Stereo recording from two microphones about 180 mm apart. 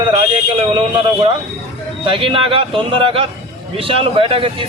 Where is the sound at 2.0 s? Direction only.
30° right (ahead or behind).